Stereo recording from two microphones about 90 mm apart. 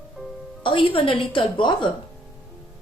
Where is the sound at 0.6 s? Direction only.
70° left (ahead or behind).